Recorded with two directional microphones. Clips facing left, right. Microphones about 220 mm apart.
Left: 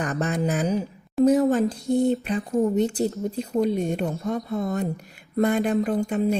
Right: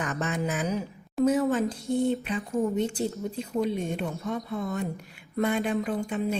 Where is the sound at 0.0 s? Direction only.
35° left (ahead or behind).